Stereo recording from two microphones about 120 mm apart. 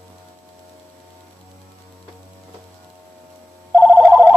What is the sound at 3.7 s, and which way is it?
Telephone, 15° right (ahead or behind).